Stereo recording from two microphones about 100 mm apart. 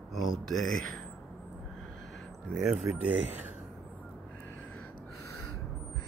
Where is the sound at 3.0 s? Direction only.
15° right (ahead or behind).